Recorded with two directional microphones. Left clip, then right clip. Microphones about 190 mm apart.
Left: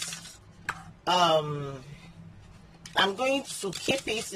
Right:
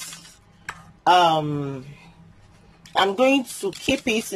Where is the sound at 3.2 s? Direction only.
50° right (ahead or behind).